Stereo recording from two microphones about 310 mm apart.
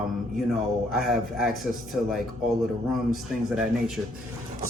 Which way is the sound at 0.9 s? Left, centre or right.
Centre.